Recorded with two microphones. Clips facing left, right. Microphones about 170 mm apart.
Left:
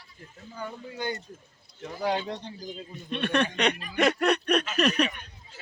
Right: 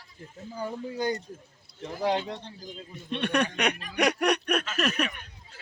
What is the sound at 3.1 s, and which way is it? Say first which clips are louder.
Speech: even; 15° right (ahead or behind).